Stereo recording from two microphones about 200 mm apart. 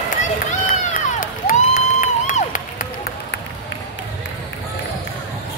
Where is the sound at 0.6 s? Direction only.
45° left (ahead or behind).